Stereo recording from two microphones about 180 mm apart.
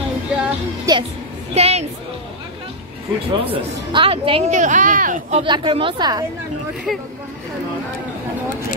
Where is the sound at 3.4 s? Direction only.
30° right (ahead or behind).